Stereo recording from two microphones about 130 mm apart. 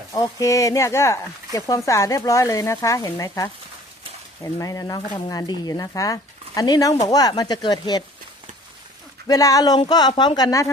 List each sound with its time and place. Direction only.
0.1 s speech: 30° left (ahead or behind)
9.2 s speech: 30° left (ahead or behind)